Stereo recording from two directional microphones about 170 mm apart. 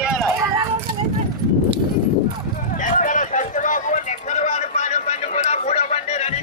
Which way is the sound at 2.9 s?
50° left (ahead or behind).